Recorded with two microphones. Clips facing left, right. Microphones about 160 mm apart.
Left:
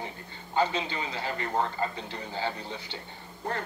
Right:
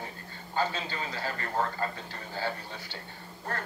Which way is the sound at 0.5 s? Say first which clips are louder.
Left 3 dB; 20° left (ahead or behind).